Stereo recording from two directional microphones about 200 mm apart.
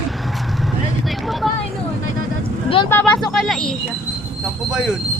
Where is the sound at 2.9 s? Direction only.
10° left (ahead or behind).